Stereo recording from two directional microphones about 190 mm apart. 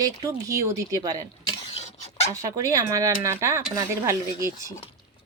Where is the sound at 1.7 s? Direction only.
35° left (ahead or behind).